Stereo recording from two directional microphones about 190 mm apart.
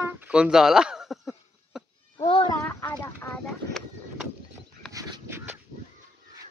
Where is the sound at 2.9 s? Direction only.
15° left (ahead or behind).